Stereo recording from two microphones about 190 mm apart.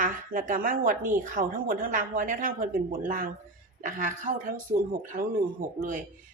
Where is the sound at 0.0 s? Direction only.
45° right (ahead or behind).